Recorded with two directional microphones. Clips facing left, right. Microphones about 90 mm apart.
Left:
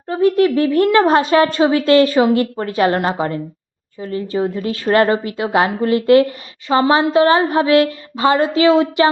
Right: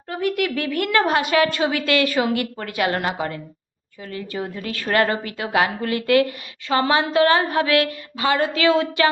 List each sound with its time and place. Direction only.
0.1 s a woman's voice: 30° left (ahead or behind)